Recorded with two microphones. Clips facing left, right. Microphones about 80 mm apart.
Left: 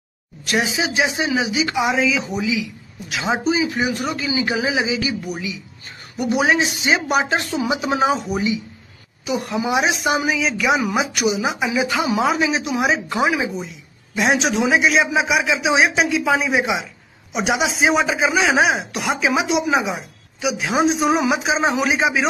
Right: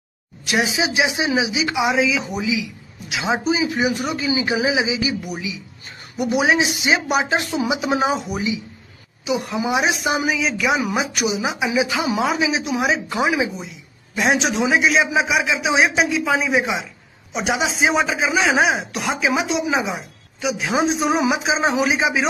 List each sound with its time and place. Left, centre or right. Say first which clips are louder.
0.5 s a man's voice: even; centre
1.6 s a woman's voice: left 1 dB; centre
4.3 s speech: right 1 dB; right
4.6 s a man's voice: right 1 dB; centre
7.6 s a man's voice: even; centre
8.0 s a woman's voice: left 2 dB; centre